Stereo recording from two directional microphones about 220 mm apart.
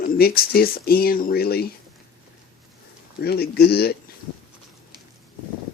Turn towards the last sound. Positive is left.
turn(degrees=45)  # may be behind; listen again after turning